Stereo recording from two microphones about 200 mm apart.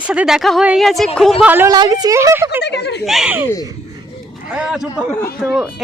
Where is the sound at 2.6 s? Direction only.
55° left (ahead or behind).